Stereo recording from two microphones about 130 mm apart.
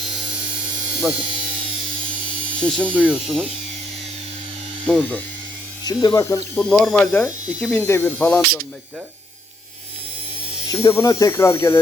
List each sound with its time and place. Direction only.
0.9 s speech: 5° right (ahead or behind)
2.6 s speech: 5° left (ahead or behind)
2.9 s speech: 10° right (ahead or behind)
4.9 s speech: 5° left (ahead or behind)
5.8 s speech: 30° left (ahead or behind)
6.6 s speech: 5° left (ahead or behind)
10.7 s speech: 25° left (ahead or behind)